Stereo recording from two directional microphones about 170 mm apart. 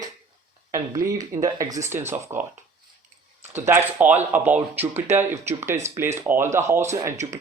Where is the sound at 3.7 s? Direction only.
10° right (ahead or behind).